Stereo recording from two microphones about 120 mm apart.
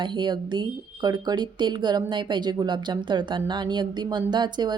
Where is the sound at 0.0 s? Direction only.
40° right (ahead or behind).